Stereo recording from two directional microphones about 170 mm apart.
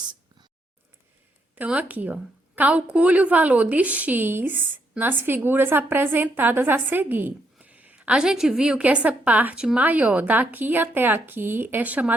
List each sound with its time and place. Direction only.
0.0 s whispering: 25° right (ahead or behind)
1.5 s a woman's voice: 10° right (ahead or behind)